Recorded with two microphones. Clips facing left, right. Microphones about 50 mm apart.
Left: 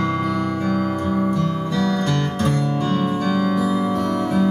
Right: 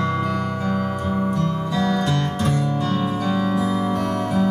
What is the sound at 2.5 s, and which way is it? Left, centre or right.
Music, left.